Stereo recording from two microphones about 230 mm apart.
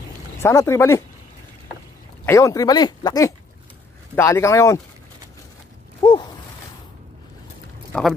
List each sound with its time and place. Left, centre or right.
0.4 s speech: centre
2.2 s speech: centre
6.0 s a sound: left
7.9 s speech: centre